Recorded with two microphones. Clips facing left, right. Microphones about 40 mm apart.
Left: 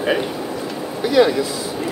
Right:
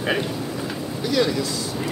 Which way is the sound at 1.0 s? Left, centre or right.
Left.